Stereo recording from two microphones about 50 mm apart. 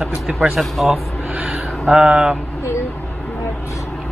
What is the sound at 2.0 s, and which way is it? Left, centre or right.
Speech, centre.